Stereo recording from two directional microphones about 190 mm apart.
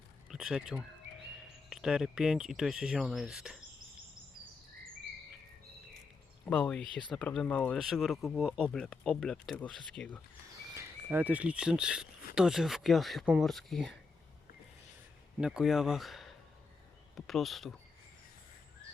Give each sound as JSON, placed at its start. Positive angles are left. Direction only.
{"t": 0.3, "sound": "speech", "side_deg": -5}
{"t": 1.0, "sound": "bird", "side_deg": -65}
{"t": 1.7, "sound": "speech", "side_deg": -5}
{"t": 6.4, "sound": "speech", "side_deg": 5}
{"t": 10.8, "sound": "speech", "side_deg": -10}
{"t": 15.4, "sound": "speech", "side_deg": -5}